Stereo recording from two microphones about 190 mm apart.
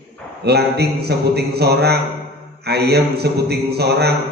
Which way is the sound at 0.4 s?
60° right (ahead or behind).